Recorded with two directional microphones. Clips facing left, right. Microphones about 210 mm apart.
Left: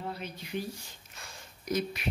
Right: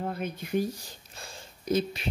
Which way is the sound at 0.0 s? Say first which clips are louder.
Right 6 dB; 50° right (ahead or behind).